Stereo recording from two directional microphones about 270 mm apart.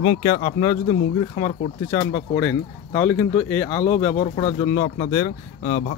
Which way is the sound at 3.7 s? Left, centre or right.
Centre.